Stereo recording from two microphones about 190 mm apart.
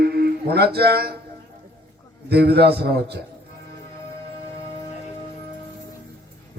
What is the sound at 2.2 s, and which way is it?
Speech, 60° right (ahead or behind).